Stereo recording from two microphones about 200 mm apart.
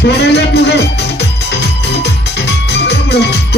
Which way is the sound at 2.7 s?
55° left (ahead or behind).